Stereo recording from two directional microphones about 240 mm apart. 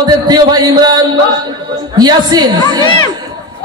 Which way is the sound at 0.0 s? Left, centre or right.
Centre.